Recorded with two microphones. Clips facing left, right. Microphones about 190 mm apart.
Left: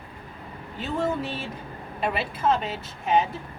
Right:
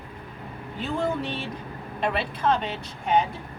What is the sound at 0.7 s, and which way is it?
A woman's voice, centre (ahead or behind).